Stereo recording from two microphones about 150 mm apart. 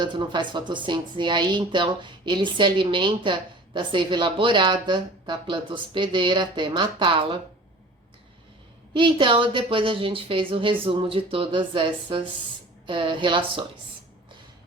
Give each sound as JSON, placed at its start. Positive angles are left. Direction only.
{"t": 0.0, "sound": "speech", "side_deg": -30}
{"t": 8.9, "sound": "speech", "side_deg": -35}